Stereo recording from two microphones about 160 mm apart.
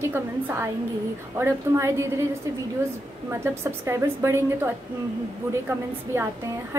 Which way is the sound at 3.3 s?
15° right (ahead or behind).